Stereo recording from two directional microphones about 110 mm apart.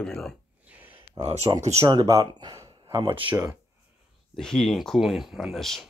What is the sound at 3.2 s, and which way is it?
Speech, 20° right (ahead or behind).